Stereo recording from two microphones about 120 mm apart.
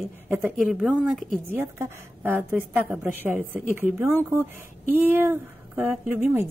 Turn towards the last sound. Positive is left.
turn(degrees=-15)  # may be behind; listen again after turning